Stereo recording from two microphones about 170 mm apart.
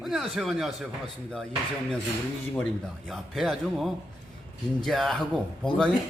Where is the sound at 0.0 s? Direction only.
Centre (ahead or behind).